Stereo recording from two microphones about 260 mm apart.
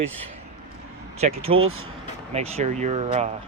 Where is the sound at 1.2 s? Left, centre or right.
Right.